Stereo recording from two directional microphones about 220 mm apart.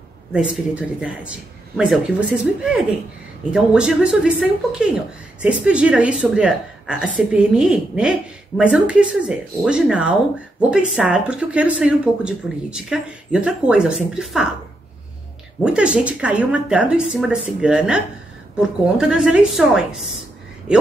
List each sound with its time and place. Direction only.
0.3 s a woman's voice: 5° right (ahead or behind)
15.6 s a woman's voice: 5° right (ahead or behind)